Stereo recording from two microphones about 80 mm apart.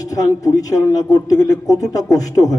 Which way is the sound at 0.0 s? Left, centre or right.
Left.